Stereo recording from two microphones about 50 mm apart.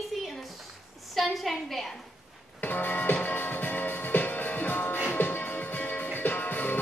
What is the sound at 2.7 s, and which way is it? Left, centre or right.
Music, left.